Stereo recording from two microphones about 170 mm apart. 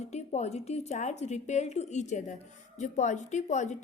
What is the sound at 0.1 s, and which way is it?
A woman's voice, 40° left (ahead or behind).